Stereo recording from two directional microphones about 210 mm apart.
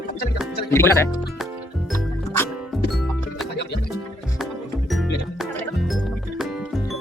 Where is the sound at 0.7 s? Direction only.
10° left (ahead or behind).